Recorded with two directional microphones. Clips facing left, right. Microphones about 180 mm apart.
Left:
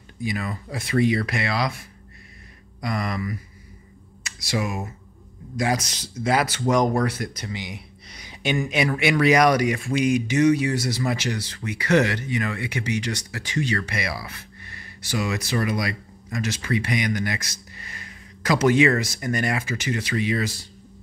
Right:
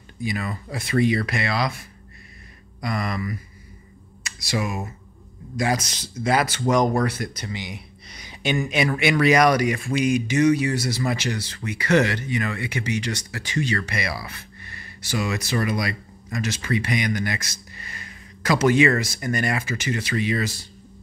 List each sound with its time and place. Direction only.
0.2 s speech: 10° left (ahead or behind)
2.8 s speech: 15° left (ahead or behind)
4.2 s speech: 20° left (ahead or behind)